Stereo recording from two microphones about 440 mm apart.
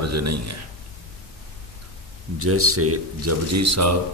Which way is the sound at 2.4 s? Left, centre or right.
Right.